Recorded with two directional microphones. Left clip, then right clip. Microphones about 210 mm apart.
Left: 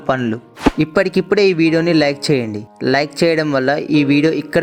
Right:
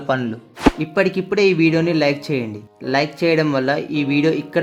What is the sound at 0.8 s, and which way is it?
Speech, 30° left (ahead or behind).